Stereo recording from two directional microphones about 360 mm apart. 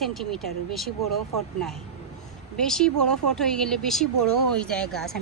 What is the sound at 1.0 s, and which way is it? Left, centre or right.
Speech, right.